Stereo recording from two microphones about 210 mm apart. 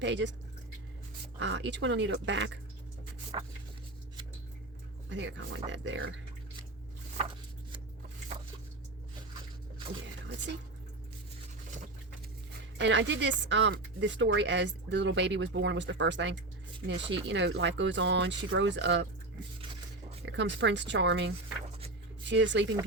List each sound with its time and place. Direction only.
0.0 s speech: 60° right (ahead or behind)
1.4 s speech: 60° right (ahead or behind)
3.3 s a sound: 25° right (ahead or behind)
5.0 s speech: 60° right (ahead or behind)
12.7 s speech: 55° right (ahead or behind)
20.2 s speech: 60° right (ahead or behind)